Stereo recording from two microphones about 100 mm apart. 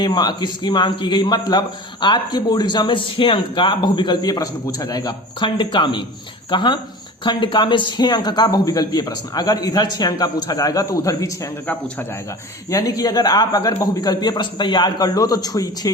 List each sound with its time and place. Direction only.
0.0 s a man's voice: 45° left (ahead or behind)
11.6 s a man's voice: 15° left (ahead or behind)
12.7 s speech: 40° left (ahead or behind)